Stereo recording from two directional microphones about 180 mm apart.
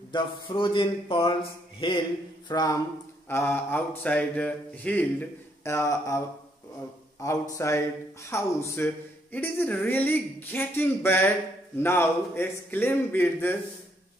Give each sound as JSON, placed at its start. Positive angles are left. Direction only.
{"t": 0.1, "sound": "speech", "side_deg": 25}